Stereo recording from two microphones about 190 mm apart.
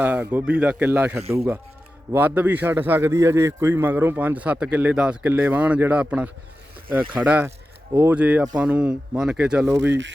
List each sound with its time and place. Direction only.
0.0 s a man's voice: 10° right (ahead or behind)
9.7 s speech: 70° right (ahead or behind)